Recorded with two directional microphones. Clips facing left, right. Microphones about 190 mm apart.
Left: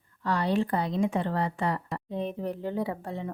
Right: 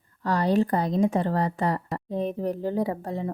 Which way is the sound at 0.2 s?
40° right (ahead or behind).